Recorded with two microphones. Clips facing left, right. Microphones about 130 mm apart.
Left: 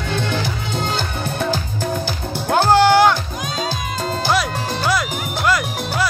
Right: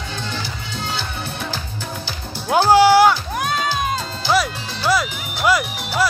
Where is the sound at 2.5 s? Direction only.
10° right (ahead or behind).